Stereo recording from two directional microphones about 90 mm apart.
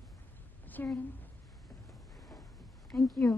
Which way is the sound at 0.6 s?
20° left (ahead or behind).